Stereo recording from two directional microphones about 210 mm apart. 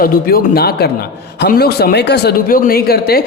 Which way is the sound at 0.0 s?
45° left (ahead or behind).